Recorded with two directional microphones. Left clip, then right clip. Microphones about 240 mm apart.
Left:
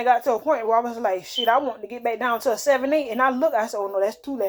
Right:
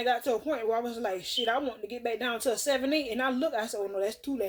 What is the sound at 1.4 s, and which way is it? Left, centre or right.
Speech, centre.